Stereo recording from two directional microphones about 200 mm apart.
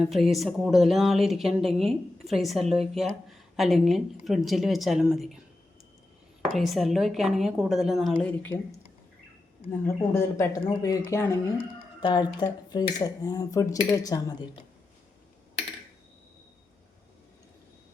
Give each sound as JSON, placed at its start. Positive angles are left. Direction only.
{"t": 0.0, "sound": "a woman's voice", "side_deg": 0}
{"t": 6.6, "sound": "a woman's voice", "side_deg": 0}
{"t": 9.8, "sound": "speech", "side_deg": 15}